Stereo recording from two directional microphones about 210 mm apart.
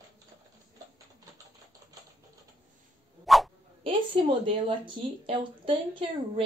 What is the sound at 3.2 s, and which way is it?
Dog, centre (ahead or behind).